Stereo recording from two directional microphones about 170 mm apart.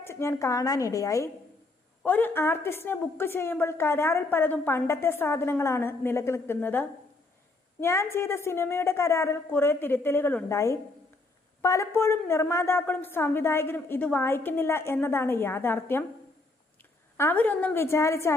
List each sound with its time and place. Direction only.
0.0 s a woman's voice: 15° left (ahead or behind)
17.2 s a woman's voice: 10° left (ahead or behind)